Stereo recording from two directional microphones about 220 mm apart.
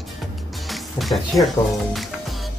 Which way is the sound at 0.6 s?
Centre (ahead or behind).